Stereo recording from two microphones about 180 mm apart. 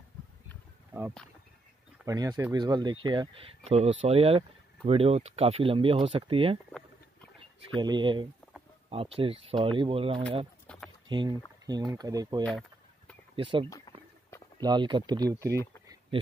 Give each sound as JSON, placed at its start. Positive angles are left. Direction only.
{"t": 2.0, "sound": "speech", "side_deg": -20}
{"t": 7.7, "sound": "speech", "side_deg": -25}
{"t": 10.7, "sound": "a sound", "side_deg": 5}
{"t": 11.1, "sound": "speech", "side_deg": -25}
{"t": 12.4, "sound": "chicken", "side_deg": 5}
{"t": 13.4, "sound": "speech", "side_deg": -25}
{"t": 13.7, "sound": "a sound", "side_deg": 20}
{"t": 14.6, "sound": "speech", "side_deg": -25}
{"t": 15.5, "sound": "speech", "side_deg": 15}